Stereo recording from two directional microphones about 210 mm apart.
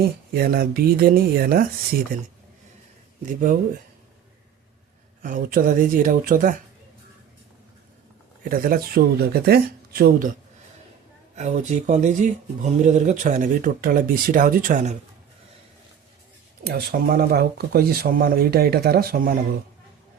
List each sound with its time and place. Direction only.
0.3 s speech: 45° right (ahead or behind)
5.2 s speech: 40° right (ahead or behind)
8.4 s speech: 40° right (ahead or behind)
11.3 s speech: 35° right (ahead or behind)
16.6 s speech: 45° right (ahead or behind)